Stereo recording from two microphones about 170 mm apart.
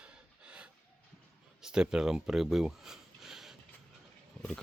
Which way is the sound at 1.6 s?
5° right (ahead or behind).